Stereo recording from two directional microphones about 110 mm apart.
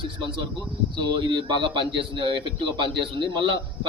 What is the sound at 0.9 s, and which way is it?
A man's voice, 45° right (ahead or behind).